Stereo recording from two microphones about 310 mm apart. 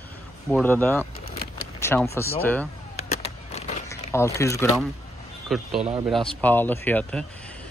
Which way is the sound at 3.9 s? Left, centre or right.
Centre.